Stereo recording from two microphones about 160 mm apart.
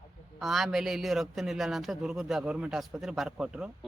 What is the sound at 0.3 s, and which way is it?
A man's voice, centre (ahead or behind).